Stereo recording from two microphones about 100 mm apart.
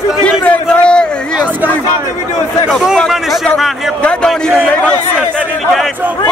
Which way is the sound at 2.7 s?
5° right (ahead or behind).